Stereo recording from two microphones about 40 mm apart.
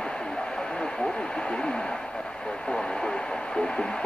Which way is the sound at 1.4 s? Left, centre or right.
Left.